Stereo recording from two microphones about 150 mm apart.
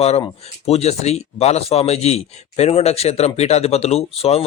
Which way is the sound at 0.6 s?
45° left (ahead or behind).